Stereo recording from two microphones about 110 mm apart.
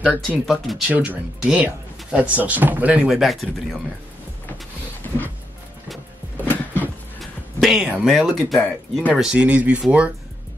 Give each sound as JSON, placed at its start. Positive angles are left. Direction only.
{"t": 0.0, "sound": "speech", "side_deg": -15}
{"t": 0.5, "sound": "speech", "side_deg": -5}
{"t": 0.9, "sound": "speech", "side_deg": -15}
{"t": 6.4, "sound": "a sound", "side_deg": 15}
{"t": 7.6, "sound": "speech", "side_deg": -5}